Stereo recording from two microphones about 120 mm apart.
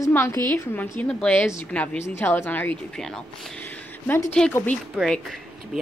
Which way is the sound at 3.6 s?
15° left (ahead or behind).